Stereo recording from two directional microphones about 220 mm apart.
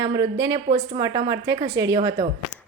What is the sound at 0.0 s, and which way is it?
A woman's voice, 15° right (ahead or behind).